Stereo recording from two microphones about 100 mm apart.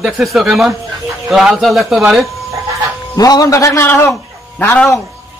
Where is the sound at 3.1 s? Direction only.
40° left (ahead or behind).